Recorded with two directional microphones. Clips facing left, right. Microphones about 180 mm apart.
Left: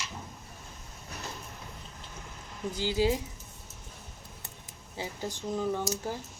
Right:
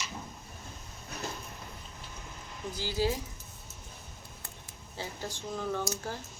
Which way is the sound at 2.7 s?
15° left (ahead or behind).